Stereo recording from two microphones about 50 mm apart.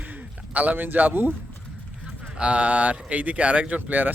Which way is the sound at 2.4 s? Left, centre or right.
Right.